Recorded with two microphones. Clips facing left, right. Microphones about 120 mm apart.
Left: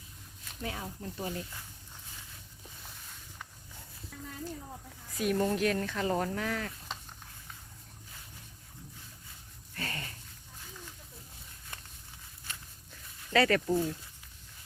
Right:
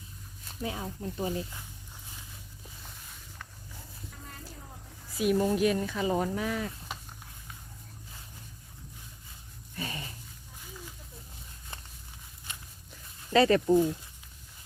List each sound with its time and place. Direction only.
0.6 s speech: 20° right (ahead or behind)
5.1 s speech: 10° right (ahead or behind)
9.7 s a sound: 15° right (ahead or behind)
12.5 s walk: 20° right (ahead or behind)